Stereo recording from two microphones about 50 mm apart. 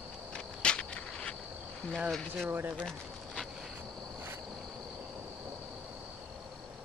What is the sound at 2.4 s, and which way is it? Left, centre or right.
Speech, right.